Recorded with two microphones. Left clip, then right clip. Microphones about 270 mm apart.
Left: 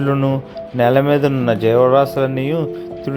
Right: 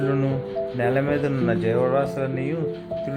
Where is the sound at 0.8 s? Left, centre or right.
Left.